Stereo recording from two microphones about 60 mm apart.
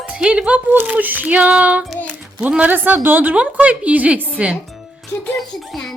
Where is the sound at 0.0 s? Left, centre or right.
Centre.